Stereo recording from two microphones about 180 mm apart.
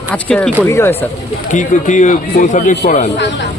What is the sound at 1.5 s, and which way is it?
A man's voice, 45° left (ahead or behind).